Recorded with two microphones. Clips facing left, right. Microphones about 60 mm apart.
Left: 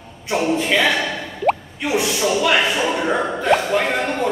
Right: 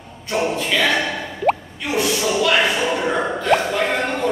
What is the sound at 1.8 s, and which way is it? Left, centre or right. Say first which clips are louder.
Plop: left 1 dB; centre.